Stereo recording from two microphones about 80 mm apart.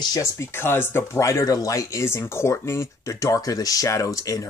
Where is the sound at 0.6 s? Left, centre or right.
Left.